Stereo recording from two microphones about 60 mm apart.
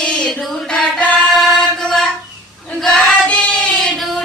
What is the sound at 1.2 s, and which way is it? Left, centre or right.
Music, centre.